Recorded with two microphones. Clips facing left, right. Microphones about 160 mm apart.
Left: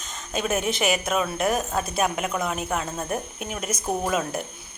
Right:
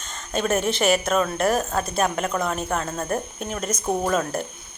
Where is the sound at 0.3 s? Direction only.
5° left (ahead or behind).